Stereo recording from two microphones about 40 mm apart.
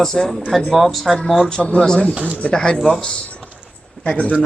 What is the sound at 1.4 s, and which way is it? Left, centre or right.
Speech, centre.